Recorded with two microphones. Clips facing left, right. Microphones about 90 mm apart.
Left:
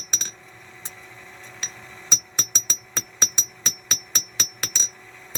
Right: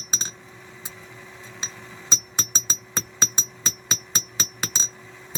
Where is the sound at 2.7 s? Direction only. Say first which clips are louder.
Right 2 dB; 40° right (ahead or behind).